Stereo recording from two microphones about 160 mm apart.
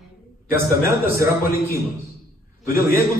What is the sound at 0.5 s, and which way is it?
Speech, 20° right (ahead or behind).